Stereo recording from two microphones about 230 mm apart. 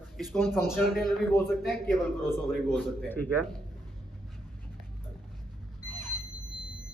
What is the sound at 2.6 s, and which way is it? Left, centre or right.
Speech, centre.